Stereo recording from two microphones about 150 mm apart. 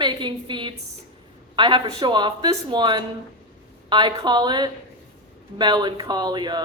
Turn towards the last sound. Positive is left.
turn(degrees=-30)  # may be behind; listen again after turning